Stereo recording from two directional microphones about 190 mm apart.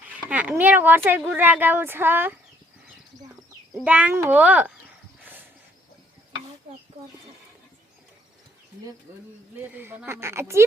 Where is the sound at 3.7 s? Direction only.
10° right (ahead or behind).